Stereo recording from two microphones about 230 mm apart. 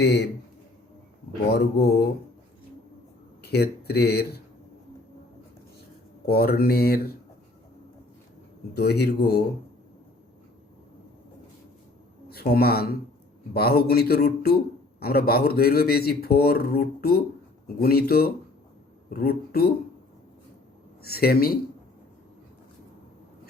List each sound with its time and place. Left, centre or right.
0.0 s speech: left
1.5 s speech: left
3.4 s speech: left
6.2 s speech: left
8.7 s speech: left
12.3 s speech: left
21.0 s speech: left